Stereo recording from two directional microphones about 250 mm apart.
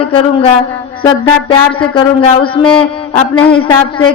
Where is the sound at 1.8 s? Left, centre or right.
Centre.